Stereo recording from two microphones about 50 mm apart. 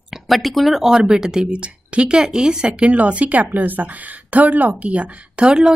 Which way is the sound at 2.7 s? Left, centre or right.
Right.